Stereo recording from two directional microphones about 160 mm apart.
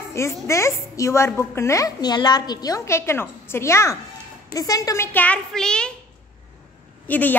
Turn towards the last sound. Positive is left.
turn(degrees=10)  # may be behind; listen again after turning